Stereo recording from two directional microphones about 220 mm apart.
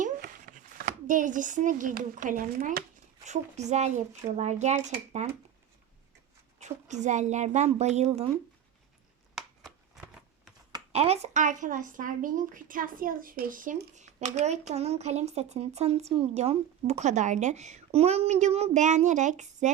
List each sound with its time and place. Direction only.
0.0 s speech: 40° right (ahead or behind)
6.6 s speech: 30° right (ahead or behind)
9.3 s a sound: centre (ahead or behind)
10.7 s speech: 20° right (ahead or behind)